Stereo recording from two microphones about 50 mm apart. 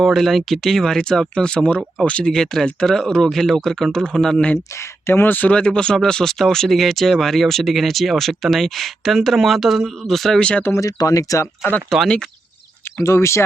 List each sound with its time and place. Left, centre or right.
0.0 s speech: centre; by 2.3 s left
2.3 s speech: centre
5.0 s speech: left
5.5 s speech: centre
10.8 s speech: left
11.9 s speech: centre
13.0 s speech: left